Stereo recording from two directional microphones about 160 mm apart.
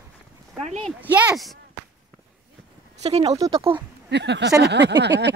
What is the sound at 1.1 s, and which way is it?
Speech, 5° right (ahead or behind).